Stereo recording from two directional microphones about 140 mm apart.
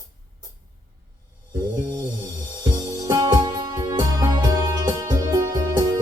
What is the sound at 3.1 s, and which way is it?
Music, 30° right (ahead or behind).